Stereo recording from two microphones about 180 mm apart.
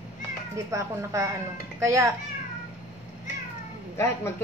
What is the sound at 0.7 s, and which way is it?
A woman's voice, 15° right (ahead or behind).